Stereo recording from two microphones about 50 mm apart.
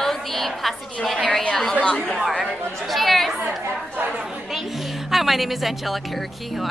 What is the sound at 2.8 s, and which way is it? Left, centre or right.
Speech, centre.